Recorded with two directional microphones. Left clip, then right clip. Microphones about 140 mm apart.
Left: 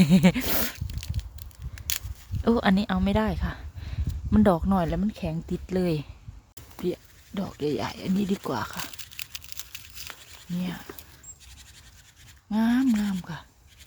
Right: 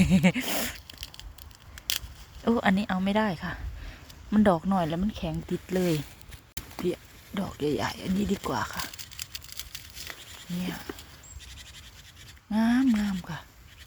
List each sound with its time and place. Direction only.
0.0 s speech: 35° left (ahead or behind)
2.4 s speech: 40° left (ahead or behind)
6.8 s a sound: 20° left (ahead or behind)
10.6 s speech: 25° left (ahead or behind)
12.5 s speech: 20° left (ahead or behind)